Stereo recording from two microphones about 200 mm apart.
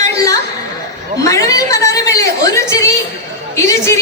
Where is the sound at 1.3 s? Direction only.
15° left (ahead or behind).